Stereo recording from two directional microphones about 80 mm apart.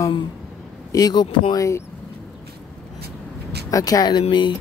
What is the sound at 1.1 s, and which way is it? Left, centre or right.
Speech, left.